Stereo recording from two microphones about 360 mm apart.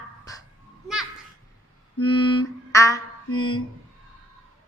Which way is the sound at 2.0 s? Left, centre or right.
Centre.